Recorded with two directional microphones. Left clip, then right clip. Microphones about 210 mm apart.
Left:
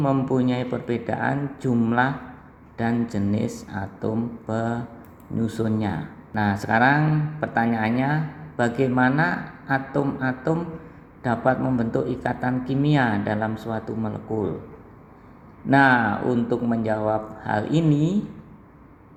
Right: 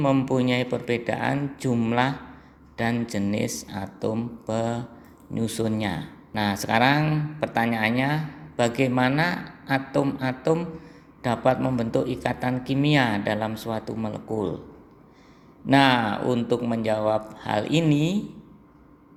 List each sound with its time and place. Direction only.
0.0 s speech: 20° right (ahead or behind)
15.7 s speech: 20° right (ahead or behind)